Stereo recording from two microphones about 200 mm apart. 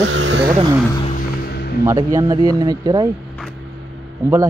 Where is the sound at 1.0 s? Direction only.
35° left (ahead or behind).